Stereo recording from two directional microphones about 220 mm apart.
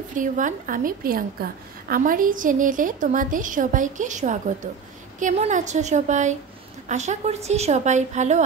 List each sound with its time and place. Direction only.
0.1 s a woman's voice: 35° right (ahead or behind)